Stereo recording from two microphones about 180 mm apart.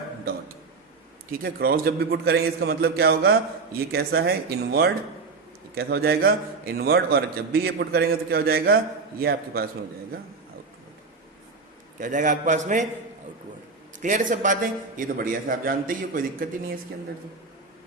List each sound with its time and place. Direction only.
1.3 s a man's voice: 55° right (ahead or behind)
11.9 s a man's voice: 45° right (ahead or behind)
14.0 s a man's voice: 45° right (ahead or behind)